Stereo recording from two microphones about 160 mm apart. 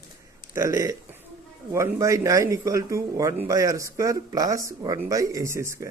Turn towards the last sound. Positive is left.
turn(degrees=-15)  # may be behind; listen again after turning